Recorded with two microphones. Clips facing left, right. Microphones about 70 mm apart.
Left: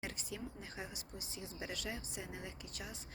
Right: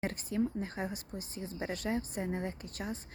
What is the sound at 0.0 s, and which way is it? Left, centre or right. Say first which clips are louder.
Speech: right 12 dB; right.